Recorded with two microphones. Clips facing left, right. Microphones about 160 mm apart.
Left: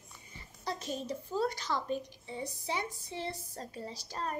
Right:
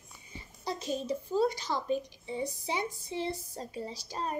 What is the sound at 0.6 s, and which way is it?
A woman's voice, 10° right (ahead or behind).